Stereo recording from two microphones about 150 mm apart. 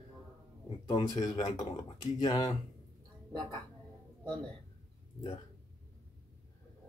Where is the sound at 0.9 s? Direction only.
30° left (ahead or behind).